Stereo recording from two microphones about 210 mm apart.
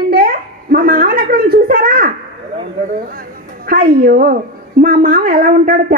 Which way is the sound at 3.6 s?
45° right (ahead or behind).